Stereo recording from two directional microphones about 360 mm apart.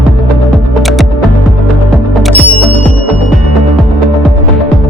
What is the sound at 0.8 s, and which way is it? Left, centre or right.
Music, centre.